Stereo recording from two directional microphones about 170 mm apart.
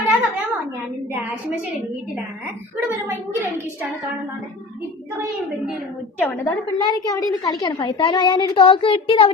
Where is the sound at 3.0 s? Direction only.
10° right (ahead or behind).